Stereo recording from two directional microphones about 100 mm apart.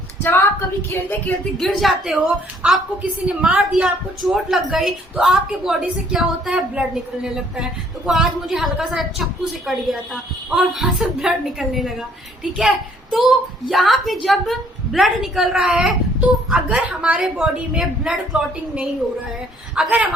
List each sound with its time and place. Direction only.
0.2 s a woman's voice: 20° left (ahead or behind)
1.5 s a woman's voice: centre (ahead or behind)